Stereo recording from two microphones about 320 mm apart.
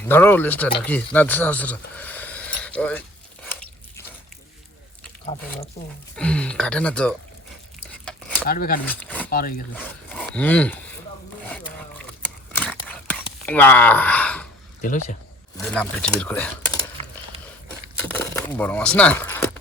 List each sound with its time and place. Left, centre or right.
0.0 s speech: centre
6.1 s speech: centre
8.4 s speech: left
8.9 s a sound: centre
9.3 s speech: left
9.7 s speech: centre
11.4 s a sound: centre
13.4 s speech: centre
15.5 s speech: centre
18.1 s a sound: centre